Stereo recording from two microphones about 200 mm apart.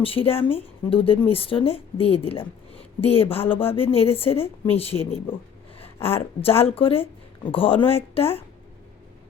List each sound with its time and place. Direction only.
0.0 s speech: 25° left (ahead or behind)
0.3 s a woman's voice: 10° left (ahead or behind)
0.5 s speech: 25° left (ahead or behind)
6.0 s a woman's voice: 10° left (ahead or behind)
6.4 s speech: 30° left (ahead or behind)